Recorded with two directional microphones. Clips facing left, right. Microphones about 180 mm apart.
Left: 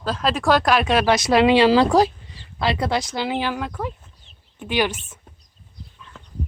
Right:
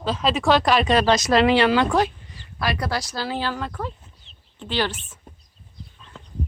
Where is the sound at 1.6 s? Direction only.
30° left (ahead or behind).